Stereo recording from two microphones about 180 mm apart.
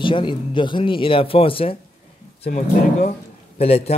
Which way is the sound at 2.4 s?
45° left (ahead or behind).